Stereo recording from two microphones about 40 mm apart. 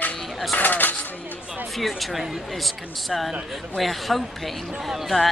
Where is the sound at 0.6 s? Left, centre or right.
Left.